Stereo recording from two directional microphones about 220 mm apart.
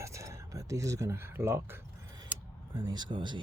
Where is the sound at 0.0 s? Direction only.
15° right (ahead or behind).